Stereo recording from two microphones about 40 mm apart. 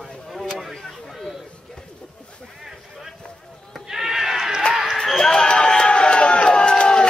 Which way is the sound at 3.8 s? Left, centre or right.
Centre.